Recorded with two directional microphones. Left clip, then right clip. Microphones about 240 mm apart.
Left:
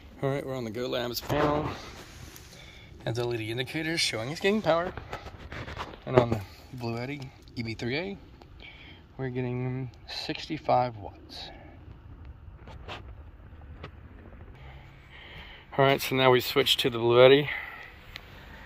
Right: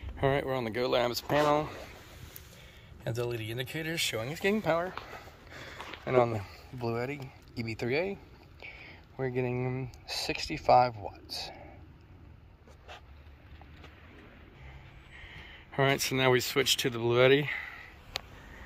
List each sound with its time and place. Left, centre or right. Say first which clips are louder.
0.2 s speech: right 2 dB; centre
3.0 s speech: left 3 dB; centre
6.8 s speech: right 1 dB; centre
15.1 s speech: left 2 dB; centre
18.1 s sniff: right 7 dB; right